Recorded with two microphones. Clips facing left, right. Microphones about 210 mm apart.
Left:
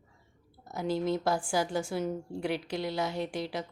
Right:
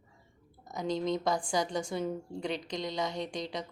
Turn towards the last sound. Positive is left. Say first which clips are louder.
# left 2 dB
turn(degrees=5)  # may be behind; listen again after turning